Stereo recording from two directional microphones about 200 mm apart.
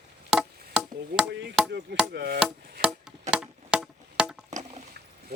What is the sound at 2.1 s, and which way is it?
Chopping, 50° right (ahead or behind).